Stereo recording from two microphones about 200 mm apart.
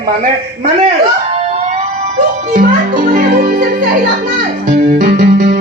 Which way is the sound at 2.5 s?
40° right (ahead or behind).